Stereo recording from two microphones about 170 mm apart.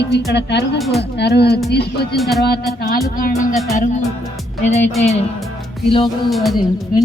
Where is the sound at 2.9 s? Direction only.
55° left (ahead or behind).